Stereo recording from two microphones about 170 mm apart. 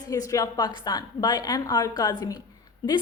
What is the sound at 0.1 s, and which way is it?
A woman's voice, 20° left (ahead or behind).